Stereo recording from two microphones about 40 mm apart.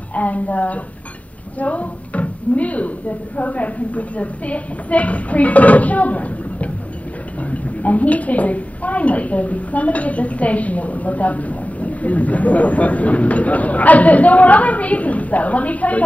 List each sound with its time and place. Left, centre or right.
0.1 s a woman's voice: left